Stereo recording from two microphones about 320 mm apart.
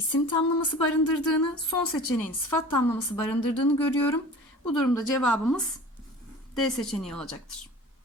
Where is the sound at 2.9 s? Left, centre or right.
Centre.